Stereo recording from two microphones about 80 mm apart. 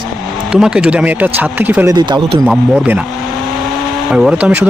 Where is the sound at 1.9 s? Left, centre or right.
Right.